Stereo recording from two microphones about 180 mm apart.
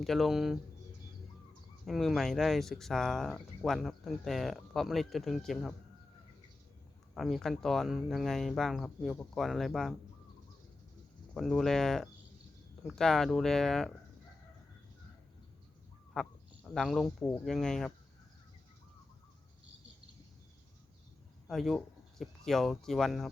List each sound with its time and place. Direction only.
0.0 s speech: centre (ahead or behind)
1.8 s speech: centre (ahead or behind)
7.1 s speech: centre (ahead or behind)
11.3 s speech: centre (ahead or behind)
16.1 s speech: 5° left (ahead or behind)
21.4 s speech: centre (ahead or behind)